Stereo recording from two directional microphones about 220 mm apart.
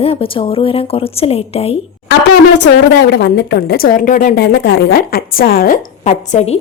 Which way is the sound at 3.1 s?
50° left (ahead or behind).